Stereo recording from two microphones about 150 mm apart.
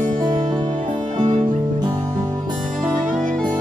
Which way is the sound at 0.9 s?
35° right (ahead or behind).